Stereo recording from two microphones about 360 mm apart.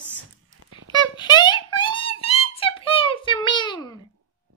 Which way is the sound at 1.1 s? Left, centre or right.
Centre.